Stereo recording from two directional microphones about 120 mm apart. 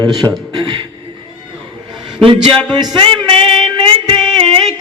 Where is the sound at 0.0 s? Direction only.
Centre (ahead or behind).